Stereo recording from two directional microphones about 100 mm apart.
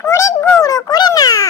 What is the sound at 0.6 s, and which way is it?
Cat, 35° left (ahead or behind).